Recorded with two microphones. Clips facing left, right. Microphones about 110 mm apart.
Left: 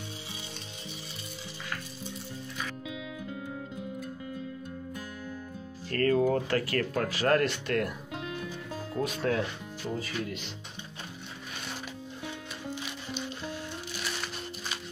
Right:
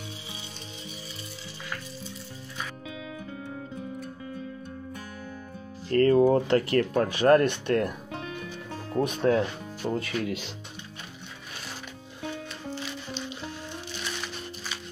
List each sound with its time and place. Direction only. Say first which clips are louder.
5.9 s speech: right 6 dB; 25° right (ahead or behind)
8.9 s speech: right 6 dB; 25° right (ahead or behind)
9.9 s speech: right 4 dB; 65° right (ahead or behind)